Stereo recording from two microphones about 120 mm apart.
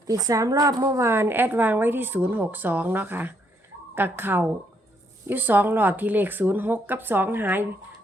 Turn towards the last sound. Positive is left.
turn(degrees=-15)  # may be behind; listen again after turning